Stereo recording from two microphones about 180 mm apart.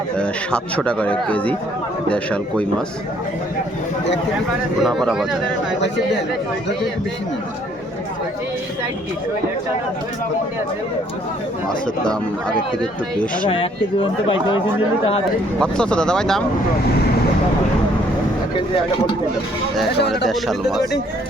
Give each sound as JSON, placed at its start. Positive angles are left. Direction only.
{"t": 0.2, "sound": "a man's voice", "side_deg": 5}
{"t": 4.8, "sound": "speech", "side_deg": 0}
{"t": 11.7, "sound": "a man's voice", "side_deg": 5}
{"t": 13.5, "sound": "speech", "side_deg": 30}
{"t": 15.5, "sound": "speech", "side_deg": 5}
{"t": 20.0, "sound": "speech", "side_deg": 65}
{"t": 20.2, "sound": "speech", "side_deg": 0}